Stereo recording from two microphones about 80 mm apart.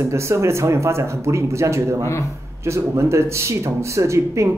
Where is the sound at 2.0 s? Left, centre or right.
Left.